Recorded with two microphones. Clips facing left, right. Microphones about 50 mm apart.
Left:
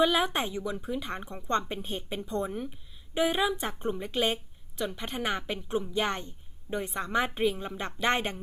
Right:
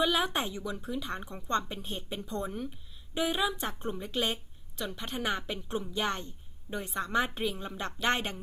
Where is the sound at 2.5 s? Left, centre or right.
Centre.